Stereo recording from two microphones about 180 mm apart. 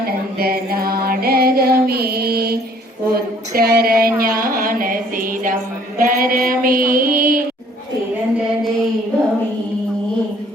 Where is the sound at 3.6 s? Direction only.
60° right (ahead or behind).